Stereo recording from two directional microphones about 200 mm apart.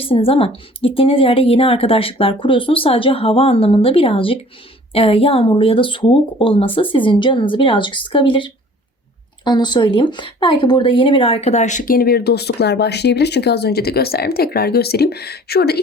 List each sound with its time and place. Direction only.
0.0 s a woman's voice: 30° left (ahead or behind); by 15.8 s 55° left (ahead or behind)